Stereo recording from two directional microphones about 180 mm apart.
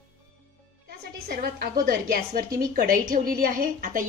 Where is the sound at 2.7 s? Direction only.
50° right (ahead or behind).